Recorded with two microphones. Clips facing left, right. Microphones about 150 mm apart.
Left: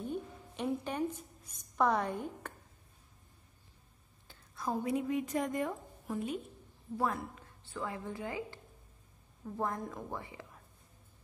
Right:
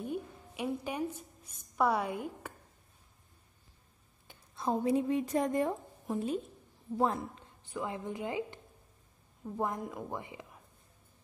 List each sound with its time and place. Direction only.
0.0 s a sound: 10° right (ahead or behind)
4.3 s a woman's voice: 25° right (ahead or behind)
9.6 s a woman's voice: 15° right (ahead or behind)